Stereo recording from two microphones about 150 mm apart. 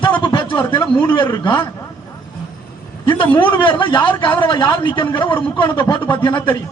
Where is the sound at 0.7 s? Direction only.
30° left (ahead or behind).